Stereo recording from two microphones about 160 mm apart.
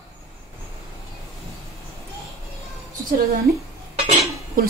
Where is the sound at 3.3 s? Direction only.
75° right (ahead or behind).